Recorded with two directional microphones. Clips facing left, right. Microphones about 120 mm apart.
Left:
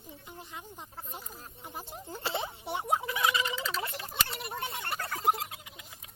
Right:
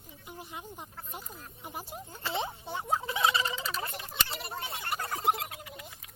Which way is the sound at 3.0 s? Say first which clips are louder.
Right 1 dB; 25° right (ahead or behind).